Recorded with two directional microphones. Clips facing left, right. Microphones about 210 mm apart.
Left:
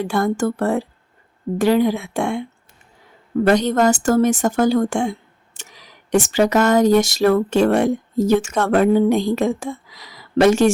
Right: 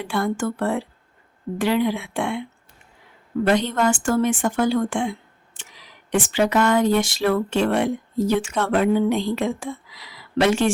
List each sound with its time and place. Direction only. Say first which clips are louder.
0.0 s speech: left 4 dB; 40° left (ahead or behind)
3.4 s speech: left 4 dB; 40° left (ahead or behind)